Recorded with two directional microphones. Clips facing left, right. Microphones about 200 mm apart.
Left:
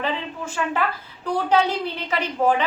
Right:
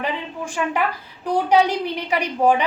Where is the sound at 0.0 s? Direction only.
15° right (ahead or behind).